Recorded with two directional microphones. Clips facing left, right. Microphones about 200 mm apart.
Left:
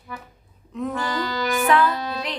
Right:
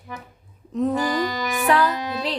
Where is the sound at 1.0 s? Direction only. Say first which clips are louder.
Right 2 dB; 15° right (ahead or behind).